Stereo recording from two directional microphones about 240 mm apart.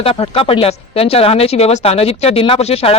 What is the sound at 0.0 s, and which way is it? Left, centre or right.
Speech, left.